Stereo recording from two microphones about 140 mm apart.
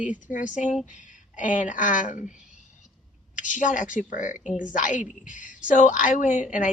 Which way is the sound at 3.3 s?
65° left (ahead or behind).